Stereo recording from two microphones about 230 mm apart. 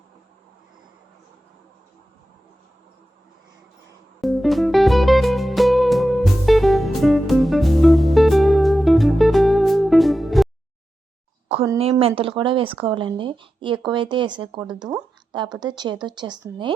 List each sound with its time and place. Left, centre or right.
4.2 s music: centre
11.8 s speech: right